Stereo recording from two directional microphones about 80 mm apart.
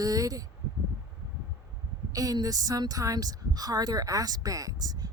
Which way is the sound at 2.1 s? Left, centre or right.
Right.